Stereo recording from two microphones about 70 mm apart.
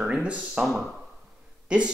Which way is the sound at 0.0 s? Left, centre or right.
Centre.